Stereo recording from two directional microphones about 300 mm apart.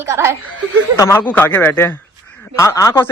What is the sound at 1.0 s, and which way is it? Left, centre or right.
Speech, centre.